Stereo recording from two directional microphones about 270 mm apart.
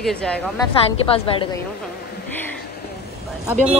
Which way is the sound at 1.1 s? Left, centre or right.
Left.